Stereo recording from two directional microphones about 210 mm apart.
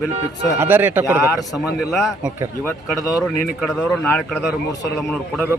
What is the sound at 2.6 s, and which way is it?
A man's voice, 10° left (ahead or behind).